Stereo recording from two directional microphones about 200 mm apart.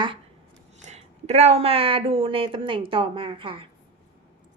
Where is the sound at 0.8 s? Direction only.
35° right (ahead or behind).